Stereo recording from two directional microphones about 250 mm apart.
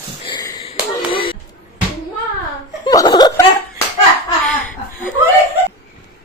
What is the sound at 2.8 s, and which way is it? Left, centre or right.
Laughter, centre.